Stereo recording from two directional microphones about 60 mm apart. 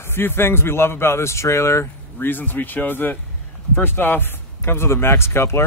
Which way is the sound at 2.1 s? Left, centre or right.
Left.